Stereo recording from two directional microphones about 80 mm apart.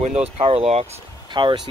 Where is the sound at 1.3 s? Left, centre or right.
Right.